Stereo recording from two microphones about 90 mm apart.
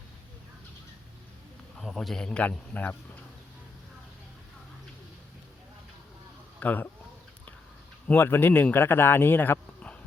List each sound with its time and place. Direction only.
1.8 s a man's voice: centre (ahead or behind); by 2.9 s 15° left (ahead or behind)
6.6 s speech: 20° left (ahead or behind)
8.0 s speech: 20° left (ahead or behind)